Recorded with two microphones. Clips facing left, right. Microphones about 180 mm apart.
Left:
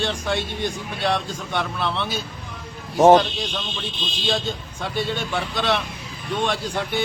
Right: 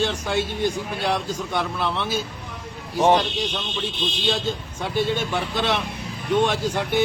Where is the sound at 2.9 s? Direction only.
40° left (ahead or behind).